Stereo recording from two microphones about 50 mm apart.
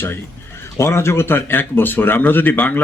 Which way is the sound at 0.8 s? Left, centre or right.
Left.